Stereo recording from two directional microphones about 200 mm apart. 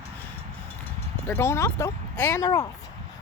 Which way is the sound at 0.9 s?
10° left (ahead or behind).